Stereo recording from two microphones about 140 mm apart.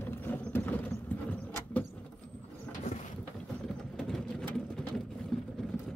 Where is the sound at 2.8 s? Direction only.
55° left (ahead or behind).